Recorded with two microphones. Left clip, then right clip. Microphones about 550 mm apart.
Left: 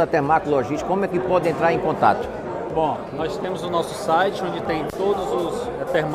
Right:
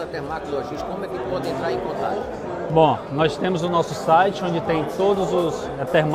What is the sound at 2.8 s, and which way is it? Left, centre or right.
A man's voice, right.